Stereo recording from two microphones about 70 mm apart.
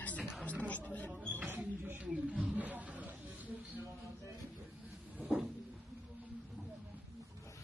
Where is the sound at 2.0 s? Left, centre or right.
Centre.